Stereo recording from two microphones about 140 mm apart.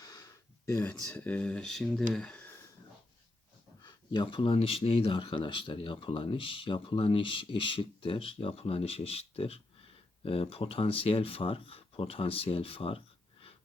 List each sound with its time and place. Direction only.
0.0 s a sound: 25° left (ahead or behind)
1.0 s speech: 10° left (ahead or behind)
3.8 s speech: 35° left (ahead or behind)